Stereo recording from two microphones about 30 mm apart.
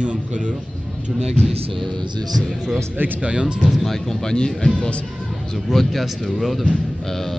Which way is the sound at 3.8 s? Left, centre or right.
Centre.